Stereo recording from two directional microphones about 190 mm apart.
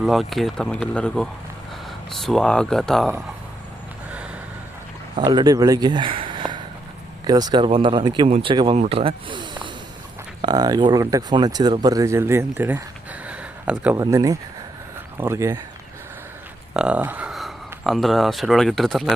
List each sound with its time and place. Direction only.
0.0 s speech: centre (ahead or behind)
5.1 s speech: 25° right (ahead or behind)
13.2 s a sound: 5° right (ahead or behind)
14.0 s speech: 20° right (ahead or behind)
16.7 s speech: 5° right (ahead or behind)